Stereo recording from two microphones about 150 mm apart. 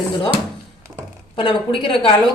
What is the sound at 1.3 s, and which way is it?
Speech, 35° left (ahead or behind).